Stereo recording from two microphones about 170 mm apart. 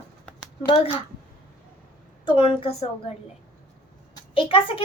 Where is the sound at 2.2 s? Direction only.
30° left (ahead or behind).